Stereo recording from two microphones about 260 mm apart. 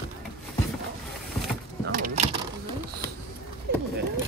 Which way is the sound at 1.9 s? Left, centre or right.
Right.